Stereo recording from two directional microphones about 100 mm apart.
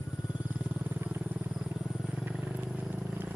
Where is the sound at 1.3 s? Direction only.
5° right (ahead or behind).